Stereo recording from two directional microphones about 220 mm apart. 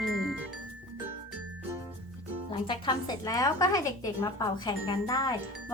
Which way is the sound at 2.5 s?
20° left (ahead or behind).